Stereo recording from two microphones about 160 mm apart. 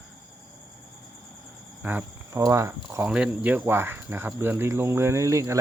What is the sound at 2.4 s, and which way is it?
Speech, 20° right (ahead or behind).